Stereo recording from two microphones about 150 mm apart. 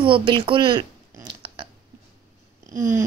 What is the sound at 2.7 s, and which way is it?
Cat, 65° right (ahead or behind).